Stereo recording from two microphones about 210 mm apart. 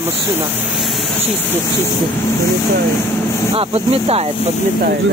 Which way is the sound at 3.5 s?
30° right (ahead or behind).